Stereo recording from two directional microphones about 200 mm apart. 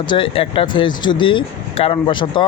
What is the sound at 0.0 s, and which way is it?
Speech, 25° left (ahead or behind).